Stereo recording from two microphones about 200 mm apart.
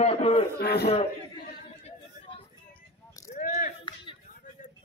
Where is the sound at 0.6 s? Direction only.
55° left (ahead or behind).